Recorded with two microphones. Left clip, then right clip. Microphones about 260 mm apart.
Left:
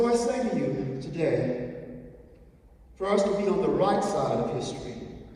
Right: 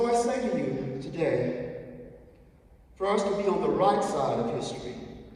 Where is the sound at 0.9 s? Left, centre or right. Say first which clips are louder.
Even; centre.